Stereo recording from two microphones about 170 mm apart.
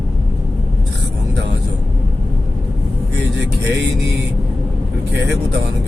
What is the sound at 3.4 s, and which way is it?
Speech, 90° right.